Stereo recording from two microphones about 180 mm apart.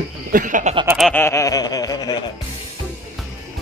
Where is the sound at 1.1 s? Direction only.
15° left (ahead or behind).